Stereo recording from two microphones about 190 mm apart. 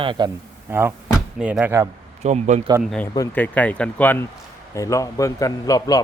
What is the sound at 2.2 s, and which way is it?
Speech, 40° right (ahead or behind).